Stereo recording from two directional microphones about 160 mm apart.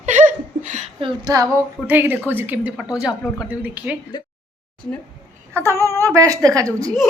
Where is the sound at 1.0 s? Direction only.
25° right (ahead or behind).